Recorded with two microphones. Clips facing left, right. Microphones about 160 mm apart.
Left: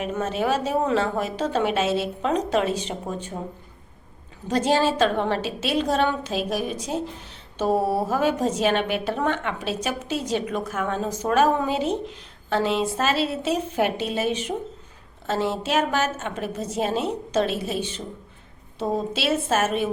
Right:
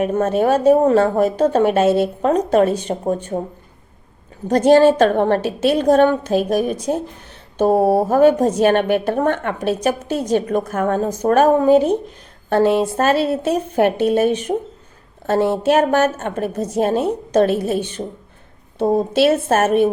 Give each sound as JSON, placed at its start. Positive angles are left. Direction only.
{"t": 0.0, "sound": "a woman's voice", "side_deg": -50}
{"t": 4.4, "sound": "a woman's voice", "side_deg": -55}